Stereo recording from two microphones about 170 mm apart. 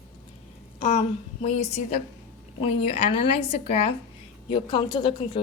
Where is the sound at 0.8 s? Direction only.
40° left (ahead or behind).